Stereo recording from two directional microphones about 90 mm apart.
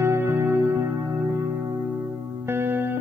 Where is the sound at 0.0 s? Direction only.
25° right (ahead or behind).